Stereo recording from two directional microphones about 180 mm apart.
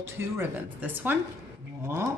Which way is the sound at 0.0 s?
15° right (ahead or behind).